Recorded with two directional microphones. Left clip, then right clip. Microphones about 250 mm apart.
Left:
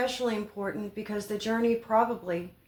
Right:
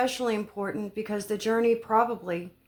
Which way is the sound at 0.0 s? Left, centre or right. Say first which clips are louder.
Right 2 dB; right.